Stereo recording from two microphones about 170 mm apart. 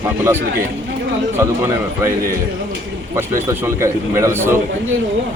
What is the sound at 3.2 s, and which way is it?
A man's voice, 15° right (ahead or behind).